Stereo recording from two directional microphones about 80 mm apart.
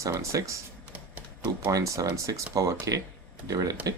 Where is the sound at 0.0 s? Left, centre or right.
Right.